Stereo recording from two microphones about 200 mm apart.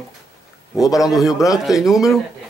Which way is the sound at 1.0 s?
Centre (ahead or behind).